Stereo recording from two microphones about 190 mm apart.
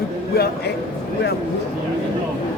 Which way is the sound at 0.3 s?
55° left (ahead or behind).